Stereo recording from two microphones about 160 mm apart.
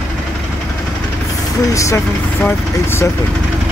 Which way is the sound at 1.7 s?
20° left (ahead or behind).